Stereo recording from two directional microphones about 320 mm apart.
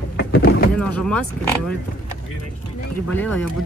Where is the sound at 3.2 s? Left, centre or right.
Centre.